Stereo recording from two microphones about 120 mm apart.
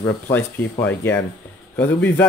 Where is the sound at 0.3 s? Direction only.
15° left (ahead or behind).